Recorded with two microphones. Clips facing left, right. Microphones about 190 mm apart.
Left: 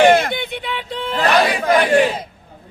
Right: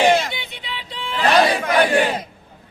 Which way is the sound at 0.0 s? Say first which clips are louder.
Left 4 dB; 55° left (ahead or behind).